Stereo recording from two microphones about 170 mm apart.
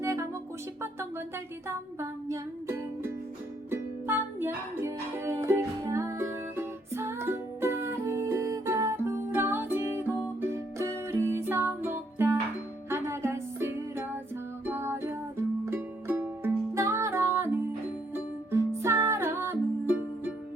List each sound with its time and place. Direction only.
0.0 s music: 15° right (ahead or behind)
1.6 s music: 15° right (ahead or behind)